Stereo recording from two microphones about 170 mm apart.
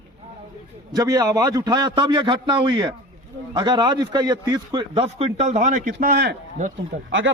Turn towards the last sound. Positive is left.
turn(degrees=-50)  # may be behind; listen again after turning